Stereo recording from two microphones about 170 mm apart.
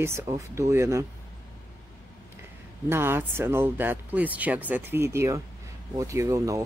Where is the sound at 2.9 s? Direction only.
15° right (ahead or behind).